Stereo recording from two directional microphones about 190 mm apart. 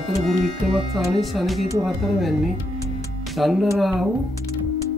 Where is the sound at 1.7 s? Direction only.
15° right (ahead or behind).